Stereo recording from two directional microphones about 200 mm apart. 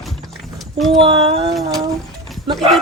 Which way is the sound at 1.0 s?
30° right (ahead or behind).